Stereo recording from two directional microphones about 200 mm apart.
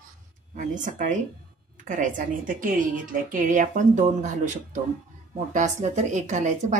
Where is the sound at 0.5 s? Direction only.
40° right (ahead or behind).